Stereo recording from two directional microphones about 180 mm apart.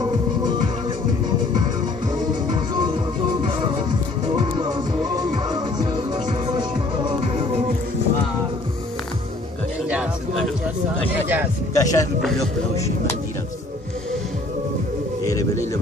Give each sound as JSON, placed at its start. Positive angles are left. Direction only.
{"t": 0.0, "sound": "music", "side_deg": -25}
{"t": 2.5, "sound": "music", "side_deg": -25}
{"t": 9.8, "sound": "music", "side_deg": -5}
{"t": 11.7, "sound": "speech", "side_deg": 20}
{"t": 15.2, "sound": "pigeon", "side_deg": 20}